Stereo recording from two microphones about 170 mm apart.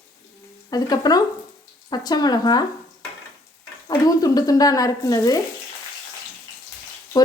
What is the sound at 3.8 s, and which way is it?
Speech, 20° left (ahead or behind).